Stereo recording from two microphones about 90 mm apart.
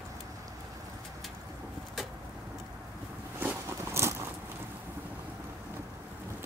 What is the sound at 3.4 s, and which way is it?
Walk, 30° right (ahead or behind).